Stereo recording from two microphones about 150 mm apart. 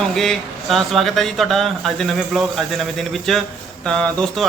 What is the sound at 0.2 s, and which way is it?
Speech, centre (ahead or behind).